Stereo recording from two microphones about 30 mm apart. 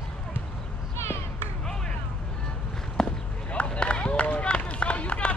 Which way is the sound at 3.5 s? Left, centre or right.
Left.